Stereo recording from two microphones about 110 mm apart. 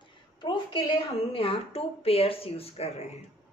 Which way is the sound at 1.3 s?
60° left (ahead or behind).